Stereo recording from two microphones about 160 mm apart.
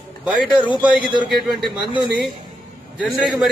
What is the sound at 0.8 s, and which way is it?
A man's voice, 10° right (ahead or behind).